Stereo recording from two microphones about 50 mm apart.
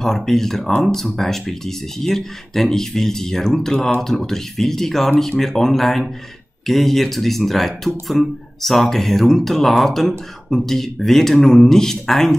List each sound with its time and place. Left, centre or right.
0.0 s speech: centre